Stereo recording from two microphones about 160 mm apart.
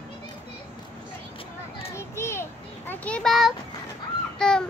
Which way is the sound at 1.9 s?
15° left (ahead or behind).